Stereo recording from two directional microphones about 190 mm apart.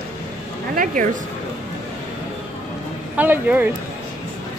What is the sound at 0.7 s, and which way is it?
Speech, 45° right (ahead or behind).